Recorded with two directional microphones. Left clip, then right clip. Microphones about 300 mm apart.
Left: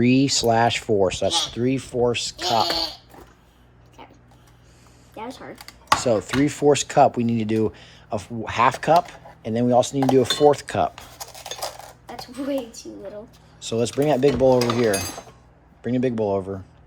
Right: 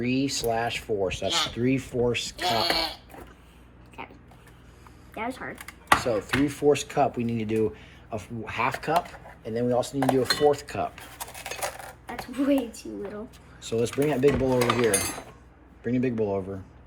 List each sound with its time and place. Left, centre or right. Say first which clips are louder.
0.0 s chopping: left 8 dB; left
1.0 s speech: left 5 dB; centre
5.1 s speech: right 2 dB; centre
6.0 s chopping: left 5 dB; left
13.6 s speech: left 3 dB; centre